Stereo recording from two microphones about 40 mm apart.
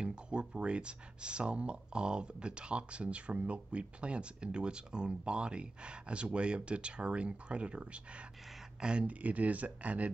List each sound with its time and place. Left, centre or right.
0.0 s speech: right
9.2 s speech: right